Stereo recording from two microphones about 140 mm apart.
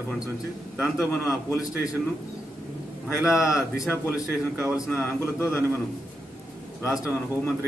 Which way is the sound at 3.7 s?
20° left (ahead or behind).